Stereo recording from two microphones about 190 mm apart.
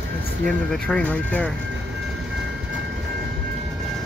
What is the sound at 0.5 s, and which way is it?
Speech, 5° left (ahead or behind).